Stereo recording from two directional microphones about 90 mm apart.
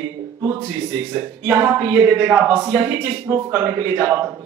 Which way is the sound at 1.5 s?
25° right (ahead or behind).